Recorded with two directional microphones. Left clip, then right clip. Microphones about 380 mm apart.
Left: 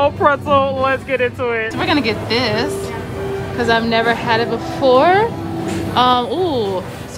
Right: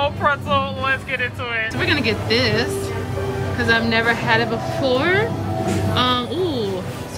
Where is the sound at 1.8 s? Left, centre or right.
Centre.